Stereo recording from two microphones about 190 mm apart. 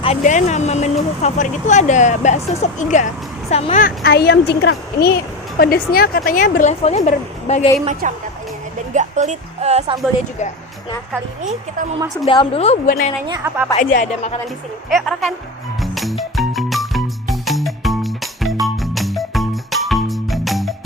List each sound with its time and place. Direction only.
0.0 s speech: 35° left (ahead or behind)
3.8 s a woman's voice: 55° left (ahead or behind); by 7.7 s 35° left (ahead or behind)
8.0 s speech: 40° right (ahead or behind)
12.2 s speech: 30° left (ahead or behind)
13.2 s a woman's voice: 20° right (ahead or behind)
13.7 s speech: 40° left (ahead or behind)
14.8 s speech: centre (ahead or behind)
15.8 s music: centre (ahead or behind)